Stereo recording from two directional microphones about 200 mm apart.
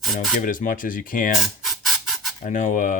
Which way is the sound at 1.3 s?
Centre (ahead or behind).